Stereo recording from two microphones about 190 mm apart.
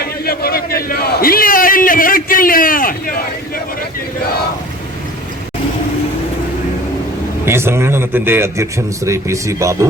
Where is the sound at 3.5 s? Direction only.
50° left (ahead or behind).